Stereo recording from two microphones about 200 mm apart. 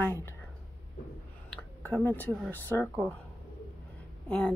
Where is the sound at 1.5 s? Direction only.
10° left (ahead or behind).